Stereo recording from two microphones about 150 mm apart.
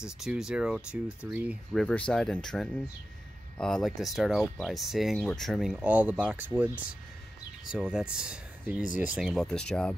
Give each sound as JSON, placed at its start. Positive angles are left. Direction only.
{"t": 0.0, "sound": "speech", "side_deg": -5}
{"t": 1.8, "sound": "speech", "side_deg": 5}
{"t": 8.8, "sound": "speech", "side_deg": 60}
{"t": 9.1, "sound": "speech", "side_deg": 0}